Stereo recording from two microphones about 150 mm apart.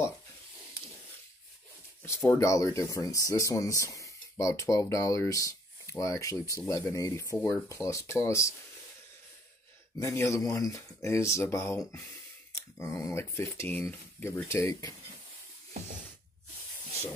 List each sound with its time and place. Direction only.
2.0 s speech: 20° left (ahead or behind)
7.3 s speech: 10° left (ahead or behind)
7.6 s speech: 20° left (ahead or behind)
9.9 s speech: 20° left (ahead or behind)